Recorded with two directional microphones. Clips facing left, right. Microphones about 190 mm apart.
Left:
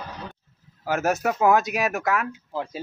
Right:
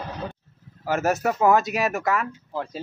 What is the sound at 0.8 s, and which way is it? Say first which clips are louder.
Speech: right 1 dB; centre (ahead or behind).